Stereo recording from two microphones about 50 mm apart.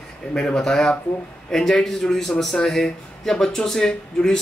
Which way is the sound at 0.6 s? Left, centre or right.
Centre.